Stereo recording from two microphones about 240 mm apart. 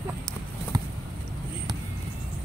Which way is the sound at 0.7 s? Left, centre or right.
Centre.